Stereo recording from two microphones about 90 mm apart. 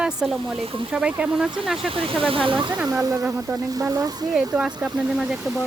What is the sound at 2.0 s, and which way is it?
Speech, 90° right.